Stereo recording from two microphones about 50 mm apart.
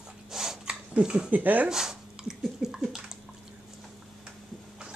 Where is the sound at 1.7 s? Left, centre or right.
Centre.